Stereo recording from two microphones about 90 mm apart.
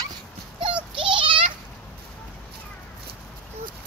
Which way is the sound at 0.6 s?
65° right (ahead or behind).